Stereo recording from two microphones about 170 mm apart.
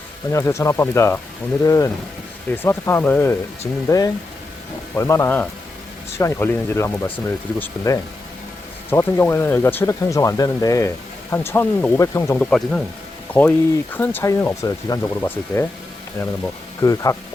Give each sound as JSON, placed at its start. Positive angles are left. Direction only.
{"t": 0.3, "sound": "speech", "side_deg": 15}
{"t": 12.4, "sound": "speech", "side_deg": 5}
{"t": 16.8, "sound": "speech", "side_deg": 20}